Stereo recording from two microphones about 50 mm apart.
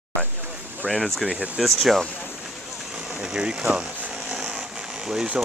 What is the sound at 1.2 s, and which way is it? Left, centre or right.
Speech, centre.